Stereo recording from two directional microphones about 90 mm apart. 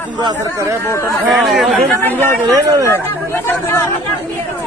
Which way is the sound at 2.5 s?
40° right (ahead or behind).